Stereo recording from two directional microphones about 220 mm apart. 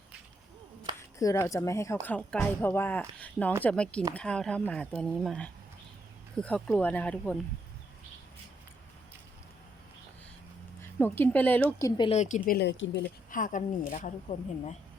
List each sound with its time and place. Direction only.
0.9 s speech: 15° left (ahead or behind)
10.8 s speech: 10° left (ahead or behind); by 13.1 s 55° left (ahead or behind)
13.3 s a woman's voice: 35° left (ahead or behind)